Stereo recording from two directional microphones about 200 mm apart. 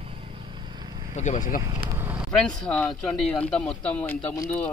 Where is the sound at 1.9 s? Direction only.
10° right (ahead or behind).